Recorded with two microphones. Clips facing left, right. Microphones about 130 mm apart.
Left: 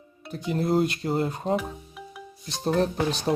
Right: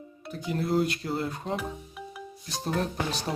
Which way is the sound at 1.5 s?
Centre (ahead or behind).